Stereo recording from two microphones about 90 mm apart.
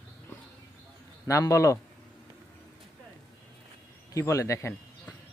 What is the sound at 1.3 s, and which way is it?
Speech, 35° left (ahead or behind).